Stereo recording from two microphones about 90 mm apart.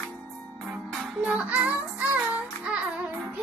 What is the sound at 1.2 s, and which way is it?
Music, 15° right (ahead or behind).